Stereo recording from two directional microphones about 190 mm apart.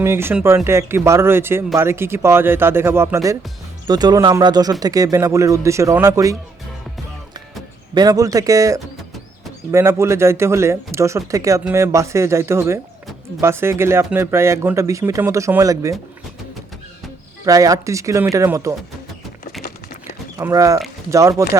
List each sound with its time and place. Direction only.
0.0 s speech: 15° right (ahead or behind)
7.9 s speech: 20° right (ahead or behind)
17.4 s speech: 20° right (ahead or behind)
20.4 s speech: 15° right (ahead or behind)